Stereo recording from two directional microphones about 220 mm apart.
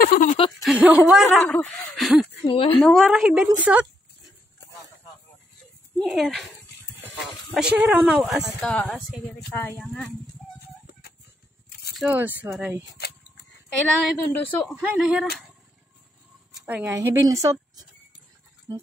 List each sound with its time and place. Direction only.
0.0 s a sound: 35° left (ahead or behind)
0.6 s speech: 5° right (ahead or behind)
2.4 s a woman's voice: 25° left (ahead or behind)
2.8 s speech: centre (ahead or behind)
5.9 s speech: centre (ahead or behind)
11.9 s a woman's voice: 5° right (ahead or behind)
14.3 s speech: 10° left (ahead or behind)
14.8 s speech: 5° right (ahead or behind)
16.6 s a woman's voice: 10° right (ahead or behind)